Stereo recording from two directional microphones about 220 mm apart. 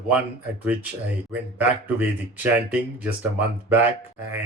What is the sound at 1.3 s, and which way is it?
Speech, 5° right (ahead or behind).